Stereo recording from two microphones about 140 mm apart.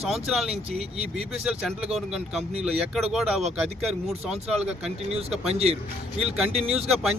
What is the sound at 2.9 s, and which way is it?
Speech, 5° right (ahead or behind).